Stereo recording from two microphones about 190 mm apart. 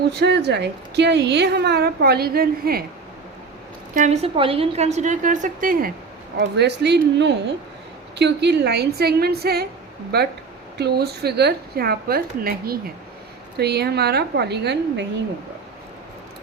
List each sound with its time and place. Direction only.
0.1 s a woman's voice: 65° right (ahead or behind)
3.9 s a woman's voice: 40° right (ahead or behind)
6.4 s a woman's voice: 60° right (ahead or behind)